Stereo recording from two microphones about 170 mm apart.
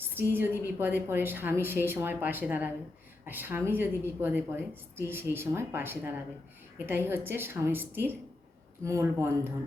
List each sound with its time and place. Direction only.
0.0 s a woman's voice: 10° right (ahead or behind)